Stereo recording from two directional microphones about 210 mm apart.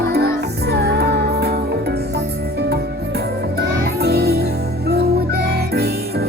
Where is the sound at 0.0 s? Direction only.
50° right (ahead or behind).